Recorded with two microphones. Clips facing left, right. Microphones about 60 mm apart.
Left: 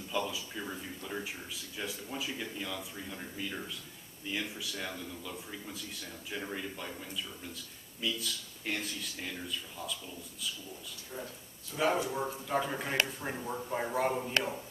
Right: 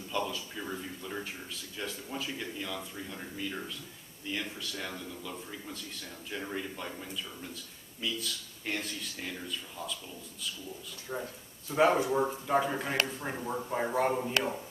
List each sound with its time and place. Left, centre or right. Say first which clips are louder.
0.3 s speech: right 2 dB; centre
1.2 s speech: even; centre
11.1 s speech: right 5 dB; right
11.9 s speech: right 4 dB; right
12.4 s speech: right 4 dB; centre